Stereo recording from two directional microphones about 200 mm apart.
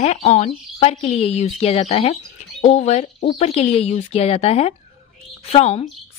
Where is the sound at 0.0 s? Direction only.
35° left (ahead or behind).